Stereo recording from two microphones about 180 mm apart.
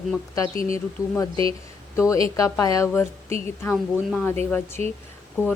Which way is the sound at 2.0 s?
15° left (ahead or behind).